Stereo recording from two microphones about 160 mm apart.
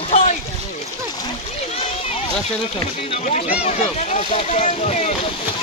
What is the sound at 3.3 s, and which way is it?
Speech, 45° left (ahead or behind).